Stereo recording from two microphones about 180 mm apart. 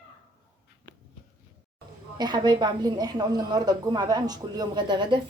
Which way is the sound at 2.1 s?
25° right (ahead or behind).